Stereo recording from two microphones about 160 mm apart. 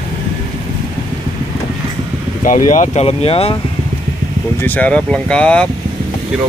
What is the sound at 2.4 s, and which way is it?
Speech, 55° left (ahead or behind).